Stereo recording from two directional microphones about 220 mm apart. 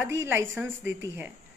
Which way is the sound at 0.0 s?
10° right (ahead or behind).